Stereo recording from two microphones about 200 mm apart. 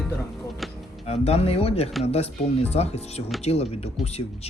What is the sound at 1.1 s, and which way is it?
Speech, 30° left (ahead or behind).